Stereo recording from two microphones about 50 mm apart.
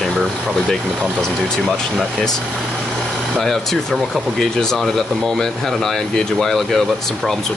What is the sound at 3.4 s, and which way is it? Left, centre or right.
Speech, centre.